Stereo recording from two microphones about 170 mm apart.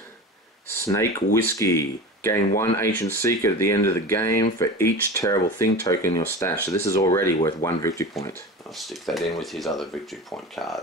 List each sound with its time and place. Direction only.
0.8 s speech: 20° left (ahead or behind)
8.7 s speech: centre (ahead or behind)